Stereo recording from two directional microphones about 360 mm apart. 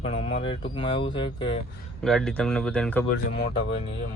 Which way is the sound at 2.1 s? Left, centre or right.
Centre.